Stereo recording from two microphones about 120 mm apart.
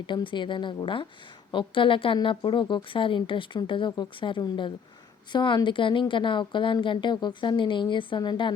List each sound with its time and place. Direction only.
0.0 s a woman's voice: 40° left (ahead or behind)